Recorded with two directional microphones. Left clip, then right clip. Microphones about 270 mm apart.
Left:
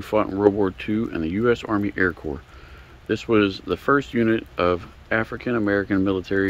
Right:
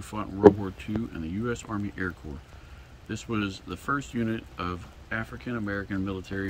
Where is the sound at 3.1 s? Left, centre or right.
Centre.